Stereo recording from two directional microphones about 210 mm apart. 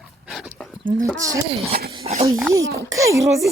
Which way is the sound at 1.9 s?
30° right (ahead or behind).